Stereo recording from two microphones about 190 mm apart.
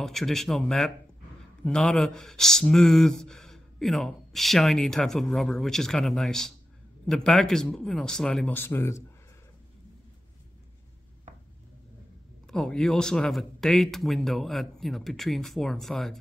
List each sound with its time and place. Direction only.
0.0 s speech: centre (ahead or behind)
12.4 s speech: centre (ahead or behind)